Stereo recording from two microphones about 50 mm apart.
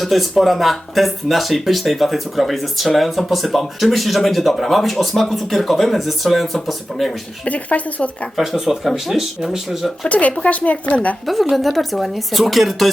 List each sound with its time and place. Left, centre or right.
0.0 s speech: centre
7.4 s speech: left
8.4 s speech: centre
10.1 s speech: left
11.3 s speech: centre